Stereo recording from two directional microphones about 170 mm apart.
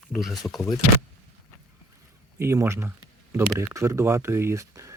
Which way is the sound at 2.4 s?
15° right (ahead or behind).